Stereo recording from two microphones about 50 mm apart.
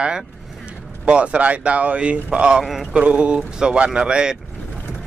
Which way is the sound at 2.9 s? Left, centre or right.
Right.